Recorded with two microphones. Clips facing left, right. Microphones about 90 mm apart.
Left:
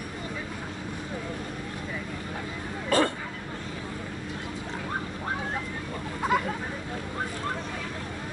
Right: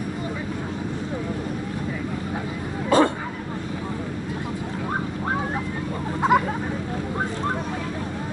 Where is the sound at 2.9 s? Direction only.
20° right (ahead or behind).